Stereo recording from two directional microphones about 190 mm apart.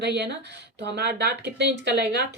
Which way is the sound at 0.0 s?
65° right (ahead or behind).